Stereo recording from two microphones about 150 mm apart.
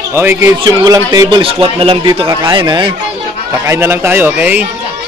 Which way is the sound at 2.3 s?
30° right (ahead or behind).